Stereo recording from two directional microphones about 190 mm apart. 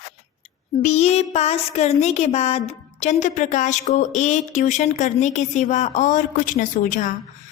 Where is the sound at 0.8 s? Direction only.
35° left (ahead or behind).